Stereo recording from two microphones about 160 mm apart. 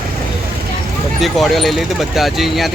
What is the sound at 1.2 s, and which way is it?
Speech, centre (ahead or behind).